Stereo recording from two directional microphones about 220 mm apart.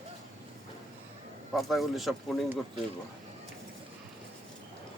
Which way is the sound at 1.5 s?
Centre (ahead or behind).